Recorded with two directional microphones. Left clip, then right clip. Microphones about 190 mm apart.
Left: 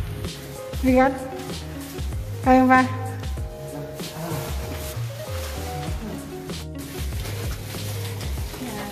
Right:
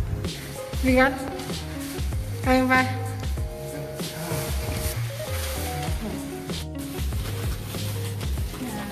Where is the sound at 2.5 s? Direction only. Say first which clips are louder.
Left 4 dB; 30° left (ahead or behind).